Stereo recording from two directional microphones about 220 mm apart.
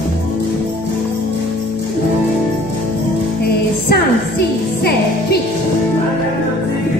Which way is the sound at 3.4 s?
45° left (ahead or behind).